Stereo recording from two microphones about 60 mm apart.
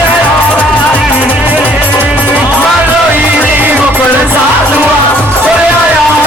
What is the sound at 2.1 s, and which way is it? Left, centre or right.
Music, right.